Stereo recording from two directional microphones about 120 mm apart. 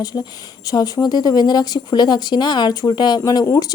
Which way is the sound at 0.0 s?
35° left (ahead or behind).